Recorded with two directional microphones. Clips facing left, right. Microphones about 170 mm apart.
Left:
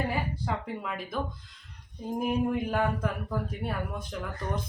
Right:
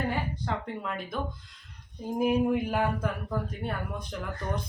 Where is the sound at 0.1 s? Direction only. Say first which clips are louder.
Even; 5° left (ahead or behind).